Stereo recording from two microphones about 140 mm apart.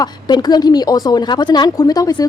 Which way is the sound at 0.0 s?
30° left (ahead or behind).